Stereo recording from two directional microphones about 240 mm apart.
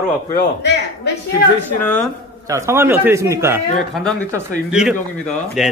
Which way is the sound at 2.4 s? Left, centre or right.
Centre.